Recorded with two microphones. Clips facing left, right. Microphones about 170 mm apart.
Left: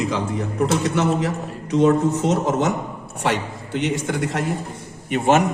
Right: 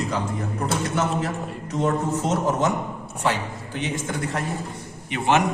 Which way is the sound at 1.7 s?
80° left.